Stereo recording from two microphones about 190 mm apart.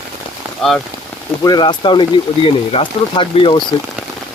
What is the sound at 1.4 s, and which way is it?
Speech, 20° left (ahead or behind).